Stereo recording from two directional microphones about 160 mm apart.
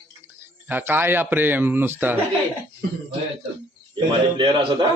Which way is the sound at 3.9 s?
30° right (ahead or behind).